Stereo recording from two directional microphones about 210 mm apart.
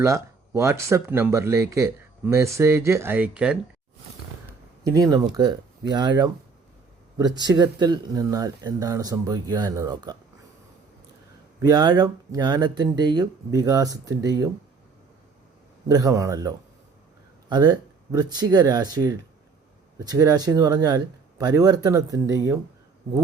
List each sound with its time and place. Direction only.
0.0 s speech: 15° right (ahead or behind)
4.8 s speech: 15° right (ahead or behind)
7.3 s speech: 20° right (ahead or behind)
11.6 s speech: 20° right (ahead or behind)
15.9 s speech: 15° right (ahead or behind)